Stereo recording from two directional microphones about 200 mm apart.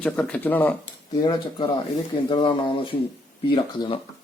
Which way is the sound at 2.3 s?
25° left (ahead or behind).